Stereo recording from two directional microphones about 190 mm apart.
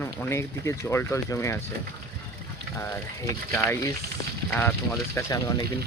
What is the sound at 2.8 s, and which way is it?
Speech, 15° left (ahead or behind).